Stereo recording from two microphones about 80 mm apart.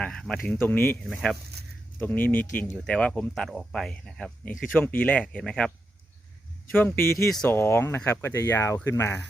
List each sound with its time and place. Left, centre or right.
0.0 s speech: centre
0.5 s speech: left; by 4.3 s centre
4.7 s speech: left
5.4 s speech: centre
6.7 s speech: left